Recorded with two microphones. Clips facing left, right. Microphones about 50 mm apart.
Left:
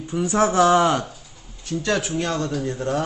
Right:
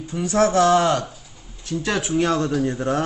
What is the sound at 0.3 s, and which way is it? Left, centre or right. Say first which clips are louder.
Speech: right 1 dB; centre.